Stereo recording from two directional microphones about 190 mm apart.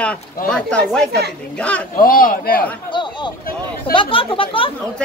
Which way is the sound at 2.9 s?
25° left (ahead or behind).